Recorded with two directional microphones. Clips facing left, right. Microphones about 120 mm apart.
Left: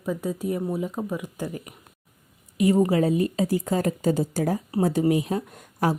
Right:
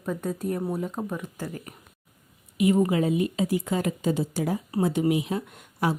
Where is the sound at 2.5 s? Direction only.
40° left (ahead or behind).